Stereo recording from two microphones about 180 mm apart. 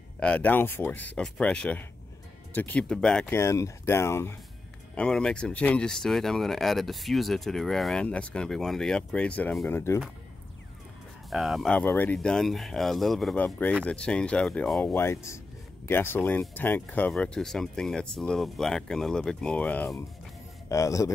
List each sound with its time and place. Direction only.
0.2 s speech: 5° left (ahead or behind)
11.2 s a man's voice: centre (ahead or behind); by 21.1 s 20° left (ahead or behind)